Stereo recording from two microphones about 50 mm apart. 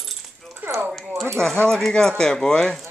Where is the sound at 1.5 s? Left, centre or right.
Centre.